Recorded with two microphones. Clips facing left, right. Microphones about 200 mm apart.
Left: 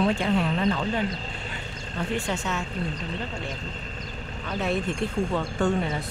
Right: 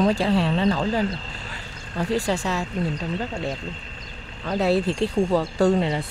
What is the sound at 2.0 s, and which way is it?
Speech, 35° right (ahead or behind).